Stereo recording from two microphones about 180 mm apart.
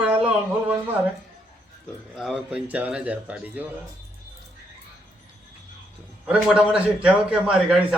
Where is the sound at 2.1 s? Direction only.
5° right (ahead or behind).